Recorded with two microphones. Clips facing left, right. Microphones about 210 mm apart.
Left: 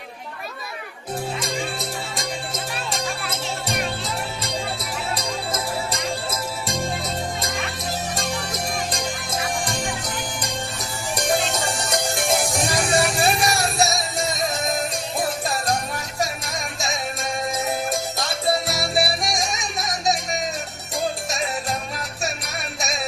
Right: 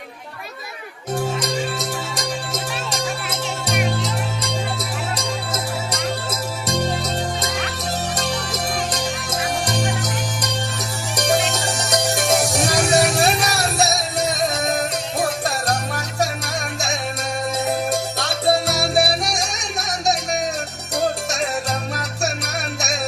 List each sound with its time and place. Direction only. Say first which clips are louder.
1.8 s music: right 3 dB; 75° right (ahead or behind)
8.9 s music: right 3 dB; 70° right (ahead or behind)
17.7 s music: right 3 dB; 70° right (ahead or behind)